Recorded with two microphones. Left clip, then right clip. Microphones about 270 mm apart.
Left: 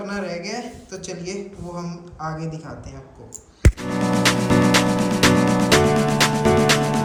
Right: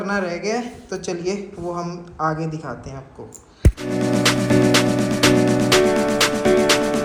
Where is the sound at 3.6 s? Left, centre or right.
Centre.